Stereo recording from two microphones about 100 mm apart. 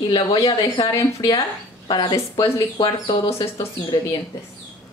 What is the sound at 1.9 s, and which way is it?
Speech, 50° left (ahead or behind).